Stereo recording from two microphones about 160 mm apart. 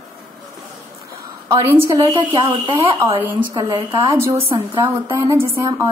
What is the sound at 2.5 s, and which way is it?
Speech, 30° right (ahead or behind).